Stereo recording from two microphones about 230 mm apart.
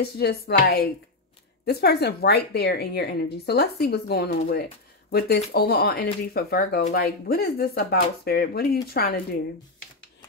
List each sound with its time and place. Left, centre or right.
0.0 s a woman's voice: left